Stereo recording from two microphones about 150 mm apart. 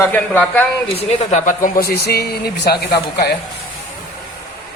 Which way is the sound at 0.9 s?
50° left (ahead or behind).